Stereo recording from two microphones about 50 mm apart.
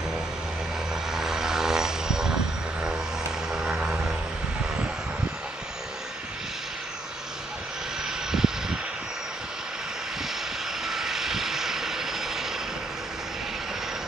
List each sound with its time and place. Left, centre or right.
1.1 s vehicle: centre
3.4 s vehicle: centre
8.3 s vehicle: centre
10.9 s vehicle: centre